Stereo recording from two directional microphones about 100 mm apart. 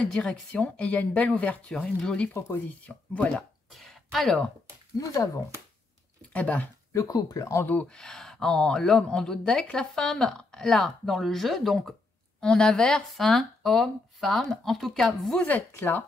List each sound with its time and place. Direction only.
0.0 s speech: 10° left (ahead or behind)
3.7 s a sound: centre (ahead or behind)
4.9 s speech: 35° left (ahead or behind)
6.3 s speech: 15° left (ahead or behind)
6.9 s speech: 30° left (ahead or behind)
7.6 s speech: 15° left (ahead or behind)
15.4 s speech: 15° left (ahead or behind)